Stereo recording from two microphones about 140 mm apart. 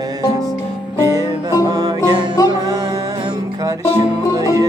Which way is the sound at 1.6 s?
25° right (ahead or behind).